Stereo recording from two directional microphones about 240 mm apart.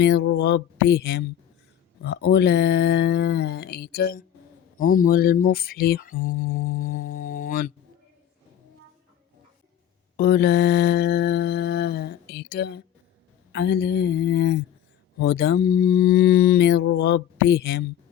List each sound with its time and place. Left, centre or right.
0.0 s mantra: left
4.9 s speech: left
10.2 s mantra: left